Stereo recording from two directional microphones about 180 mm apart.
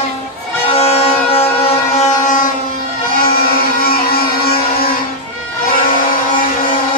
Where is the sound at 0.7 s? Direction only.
30° left (ahead or behind).